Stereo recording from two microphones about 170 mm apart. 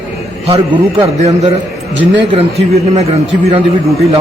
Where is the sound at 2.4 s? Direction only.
40° right (ahead or behind).